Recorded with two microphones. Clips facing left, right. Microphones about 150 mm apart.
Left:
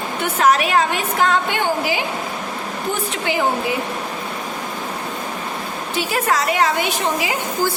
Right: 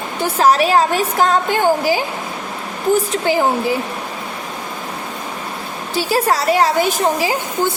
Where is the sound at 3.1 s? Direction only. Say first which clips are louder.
Right 5 dB; 35° right (ahead or behind).